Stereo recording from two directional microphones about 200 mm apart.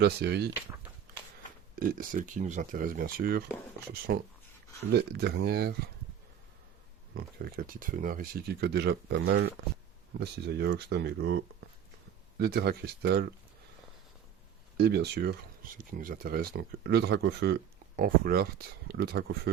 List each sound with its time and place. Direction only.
0.0 s speech: 55° right (ahead or behind)
1.7 s speech: 45° right (ahead or behind)
7.2 s speech: 50° right (ahead or behind)
12.4 s speech: 55° right (ahead or behind)
14.8 s speech: 55° right (ahead or behind)